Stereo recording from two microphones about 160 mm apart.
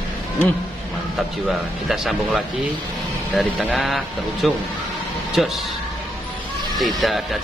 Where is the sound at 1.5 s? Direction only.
Centre (ahead or behind).